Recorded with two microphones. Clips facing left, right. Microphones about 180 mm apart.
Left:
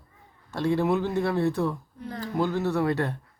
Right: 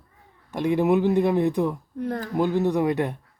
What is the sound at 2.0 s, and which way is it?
Speech, 55° right (ahead or behind).